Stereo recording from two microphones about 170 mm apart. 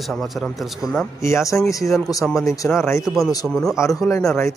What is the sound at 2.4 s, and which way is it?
Speech, 20° left (ahead or behind).